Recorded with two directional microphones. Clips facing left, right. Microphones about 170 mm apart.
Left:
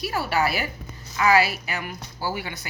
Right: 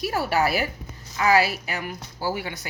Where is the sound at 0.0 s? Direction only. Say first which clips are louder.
Right 1 dB; 45° right (ahead or behind).